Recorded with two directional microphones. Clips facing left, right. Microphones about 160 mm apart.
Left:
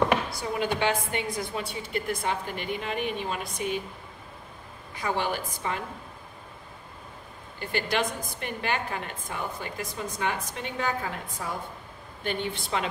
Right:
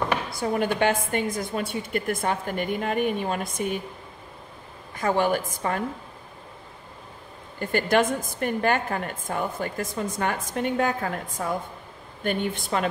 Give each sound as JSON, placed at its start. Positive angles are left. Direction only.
{"t": 0.3, "sound": "a woman's voice", "side_deg": -50}
{"t": 4.9, "sound": "a woman's voice", "side_deg": -45}
{"t": 7.5, "sound": "a woman's voice", "side_deg": -45}